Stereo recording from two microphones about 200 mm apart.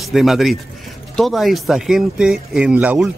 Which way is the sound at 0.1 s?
Centre (ahead or behind).